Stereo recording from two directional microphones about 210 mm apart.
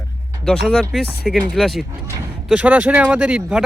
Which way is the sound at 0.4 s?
5° left (ahead or behind).